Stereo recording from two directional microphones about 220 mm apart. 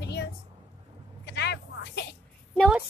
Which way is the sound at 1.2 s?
50° left (ahead or behind).